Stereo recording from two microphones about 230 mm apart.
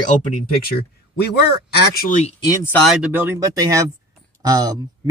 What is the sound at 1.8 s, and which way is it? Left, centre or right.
Speech, left.